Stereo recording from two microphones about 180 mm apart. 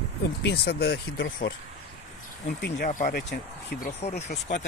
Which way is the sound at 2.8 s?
45° left (ahead or behind).